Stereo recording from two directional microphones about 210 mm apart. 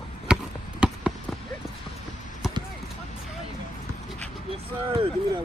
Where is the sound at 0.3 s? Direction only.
5° right (ahead or behind).